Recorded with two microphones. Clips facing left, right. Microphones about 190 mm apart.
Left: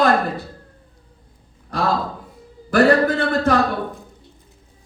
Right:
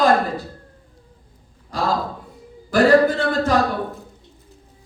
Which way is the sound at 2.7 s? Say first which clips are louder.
Right 1 dB; 60° left (ahead or behind).